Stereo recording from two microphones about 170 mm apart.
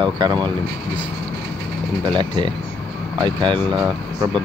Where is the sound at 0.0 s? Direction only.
25° right (ahead or behind).